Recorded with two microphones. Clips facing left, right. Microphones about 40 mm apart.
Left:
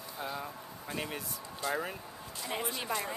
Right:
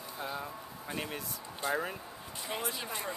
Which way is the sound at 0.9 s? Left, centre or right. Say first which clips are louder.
Left 1 dB; centre.